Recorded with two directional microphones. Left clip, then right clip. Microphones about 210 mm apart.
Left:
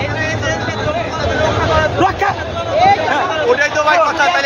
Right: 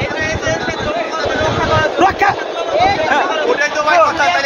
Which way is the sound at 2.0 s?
45° right (ahead or behind).